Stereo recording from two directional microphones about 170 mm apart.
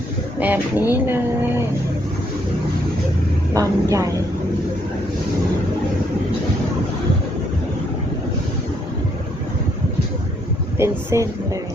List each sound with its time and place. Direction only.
0.3 s speech: 10° right (ahead or behind)
3.5 s speech: 20° right (ahead or behind)
10.8 s speech: 15° right (ahead or behind)